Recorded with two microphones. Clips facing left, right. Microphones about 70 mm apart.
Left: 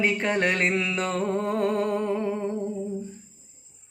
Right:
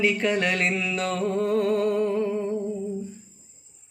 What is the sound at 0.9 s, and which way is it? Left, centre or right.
Music, left.